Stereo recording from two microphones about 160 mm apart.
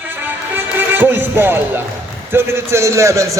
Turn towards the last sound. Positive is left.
turn(degrees=-20)  # may be behind; listen again after turning